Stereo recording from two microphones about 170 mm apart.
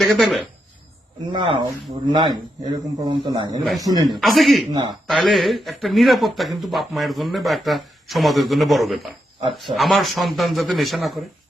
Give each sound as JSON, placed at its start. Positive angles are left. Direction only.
{"t": 0.0, "sound": "speech", "side_deg": 0}
{"t": 1.3, "sound": "a man's voice", "side_deg": -30}
{"t": 4.2, "sound": "a man's voice", "side_deg": 0}